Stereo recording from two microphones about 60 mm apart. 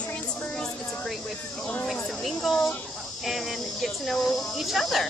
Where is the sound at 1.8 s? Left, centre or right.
Centre.